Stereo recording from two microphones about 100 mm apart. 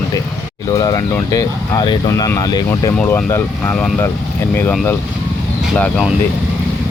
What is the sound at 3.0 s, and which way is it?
Speech, 25° left (ahead or behind).